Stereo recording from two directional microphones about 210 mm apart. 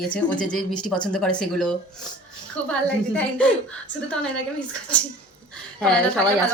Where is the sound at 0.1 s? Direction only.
5° left (ahead or behind).